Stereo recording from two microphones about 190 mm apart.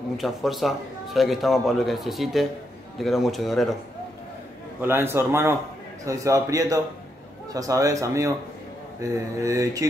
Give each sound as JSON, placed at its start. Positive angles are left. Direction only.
{"t": 0.2, "sound": "a man's voice", "side_deg": 0}
{"t": 4.8, "sound": "speech", "side_deg": -10}